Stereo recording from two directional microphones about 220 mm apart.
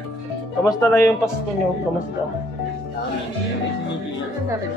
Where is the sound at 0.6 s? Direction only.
15° left (ahead or behind).